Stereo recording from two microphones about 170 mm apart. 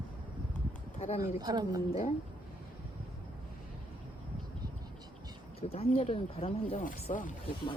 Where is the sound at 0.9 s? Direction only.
40° left (ahead or behind).